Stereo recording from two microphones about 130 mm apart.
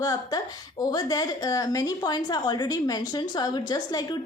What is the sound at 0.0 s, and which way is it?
A woman's voice, 30° left (ahead or behind).